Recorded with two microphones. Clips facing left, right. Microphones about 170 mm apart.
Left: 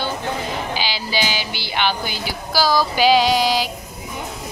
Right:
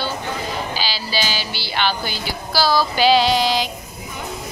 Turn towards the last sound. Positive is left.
turn(degrees=10)  # may be behind; listen again after turning